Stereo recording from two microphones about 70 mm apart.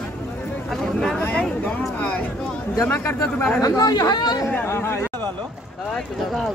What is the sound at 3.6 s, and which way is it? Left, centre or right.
Speech, left.